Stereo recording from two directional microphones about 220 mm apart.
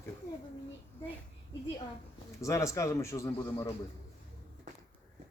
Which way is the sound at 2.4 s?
15° left (ahead or behind).